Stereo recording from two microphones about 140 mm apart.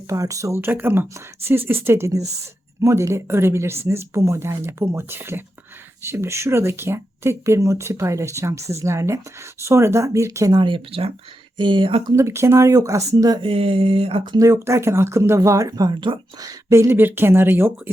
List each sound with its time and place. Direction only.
0.1 s speech: 25° right (ahead or behind)
12.1 s speech: 20° right (ahead or behind)
13.4 s speech: 40° right (ahead or behind)
14.3 s speech: 20° right (ahead or behind)